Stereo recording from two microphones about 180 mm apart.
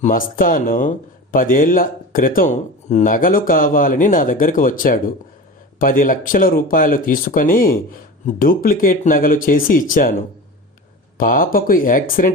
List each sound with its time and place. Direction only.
0.0 s speech: 50° left (ahead or behind)
11.2 s speech: 50° left (ahead or behind)